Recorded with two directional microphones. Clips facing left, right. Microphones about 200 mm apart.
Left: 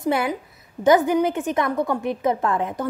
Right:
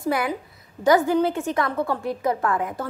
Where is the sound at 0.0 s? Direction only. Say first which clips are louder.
Left 2 dB; 25° left (ahead or behind).